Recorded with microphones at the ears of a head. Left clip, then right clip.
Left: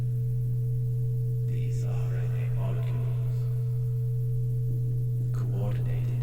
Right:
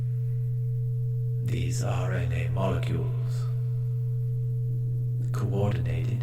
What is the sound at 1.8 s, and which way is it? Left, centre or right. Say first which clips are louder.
Speech: right 6 dB; right.